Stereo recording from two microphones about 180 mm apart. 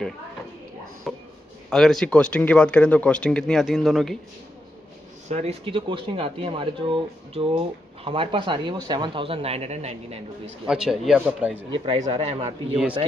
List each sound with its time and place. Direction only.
1.1 s a sound: centre (ahead or behind)
1.7 s speech: 5° left (ahead or behind)
5.3 s speech: 35° right (ahead or behind)
10.7 s speech: 5° right (ahead or behind)
11.7 s speech: 25° right (ahead or behind)